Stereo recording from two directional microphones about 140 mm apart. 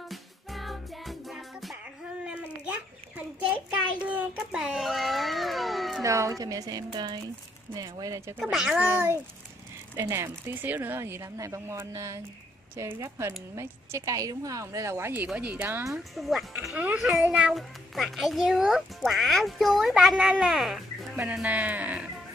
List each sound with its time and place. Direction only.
0.1 s music: centre (ahead or behind)
2.2 s a sound: 10° right (ahead or behind)
6.0 s speech: 20° right (ahead or behind)
8.4 s a child's voice: 5° right (ahead or behind)
15.9 s a child's voice: centre (ahead or behind)